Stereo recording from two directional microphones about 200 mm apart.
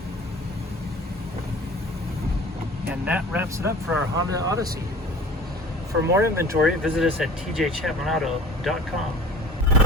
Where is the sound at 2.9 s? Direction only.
5° right (ahead or behind).